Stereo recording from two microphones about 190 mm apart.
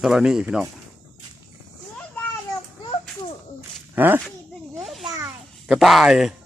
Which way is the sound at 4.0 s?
10° right (ahead or behind).